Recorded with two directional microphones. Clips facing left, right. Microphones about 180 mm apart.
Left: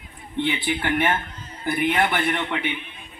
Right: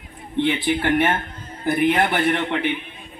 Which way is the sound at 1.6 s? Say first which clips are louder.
Right 3 dB; 40° right (ahead or behind).